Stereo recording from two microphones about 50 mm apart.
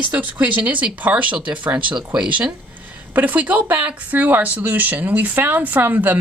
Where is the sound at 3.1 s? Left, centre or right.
Right.